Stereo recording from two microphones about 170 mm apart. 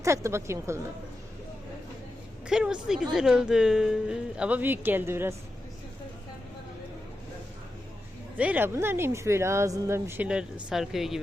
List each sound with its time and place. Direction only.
0.0 s speech: 15° right (ahead or behind)
2.5 s speech: 5° right (ahead or behind)
8.4 s speech: 10° right (ahead or behind)